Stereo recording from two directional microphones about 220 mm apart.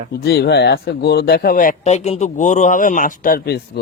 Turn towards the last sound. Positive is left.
turn(degrees=40)  # may be behind; listen again after turning